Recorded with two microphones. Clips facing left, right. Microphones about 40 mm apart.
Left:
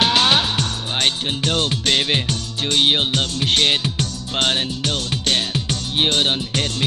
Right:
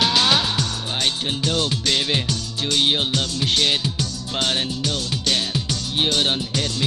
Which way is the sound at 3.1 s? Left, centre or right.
Left.